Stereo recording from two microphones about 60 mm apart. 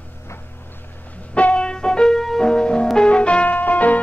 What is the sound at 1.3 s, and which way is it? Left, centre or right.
Music, centre.